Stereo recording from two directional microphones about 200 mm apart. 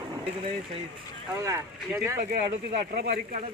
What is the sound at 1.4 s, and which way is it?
Speech, 15° right (ahead or behind).